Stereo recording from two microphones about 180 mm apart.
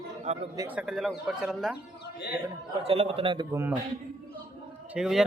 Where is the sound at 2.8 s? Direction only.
35° right (ahead or behind).